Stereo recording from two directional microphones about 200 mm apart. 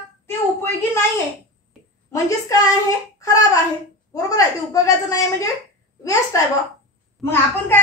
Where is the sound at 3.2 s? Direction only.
15° left (ahead or behind).